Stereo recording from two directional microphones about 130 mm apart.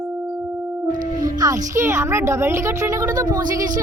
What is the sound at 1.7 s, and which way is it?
Speech, 20° right (ahead or behind).